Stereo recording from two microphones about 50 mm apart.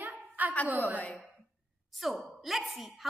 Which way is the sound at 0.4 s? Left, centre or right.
Right.